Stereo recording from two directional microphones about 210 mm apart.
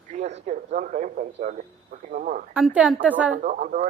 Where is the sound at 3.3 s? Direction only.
40° right (ahead or behind).